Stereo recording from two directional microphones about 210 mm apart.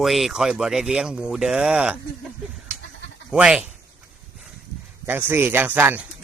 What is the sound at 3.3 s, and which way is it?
Speech, 5° right (ahead or behind).